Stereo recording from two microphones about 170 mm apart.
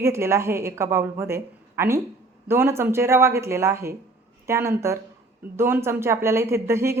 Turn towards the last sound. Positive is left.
turn(degrees=-15)  # may be behind; listen again after turning